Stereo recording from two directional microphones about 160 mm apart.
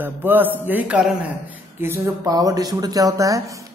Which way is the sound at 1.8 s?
20° right (ahead or behind).